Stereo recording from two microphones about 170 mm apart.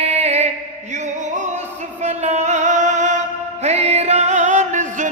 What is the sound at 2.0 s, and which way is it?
Music, 40° right (ahead or behind).